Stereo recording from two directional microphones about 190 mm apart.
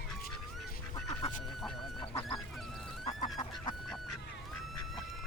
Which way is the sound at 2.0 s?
30° left (ahead or behind).